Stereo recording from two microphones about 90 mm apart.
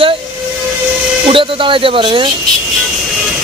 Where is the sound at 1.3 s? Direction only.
75° right (ahead or behind).